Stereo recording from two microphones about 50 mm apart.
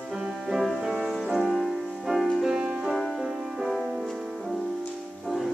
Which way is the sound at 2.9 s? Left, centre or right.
Centre.